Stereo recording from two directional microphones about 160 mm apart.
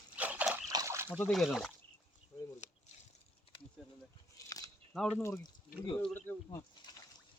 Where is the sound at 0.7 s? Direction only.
20° right (ahead or behind).